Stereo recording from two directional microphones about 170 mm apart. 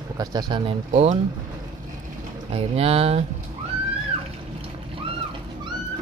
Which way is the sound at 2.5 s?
35° right (ahead or behind).